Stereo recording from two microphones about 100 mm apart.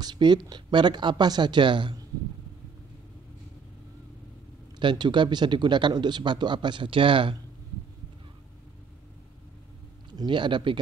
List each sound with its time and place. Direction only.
0.0 s speech: 50° right (ahead or behind)
4.7 s speech: 50° right (ahead or behind)
10.1 s speech: 50° right (ahead or behind)